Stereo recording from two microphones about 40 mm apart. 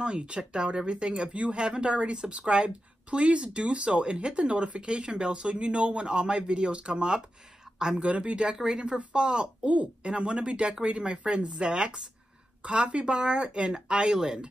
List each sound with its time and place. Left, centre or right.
0.0 s speech: right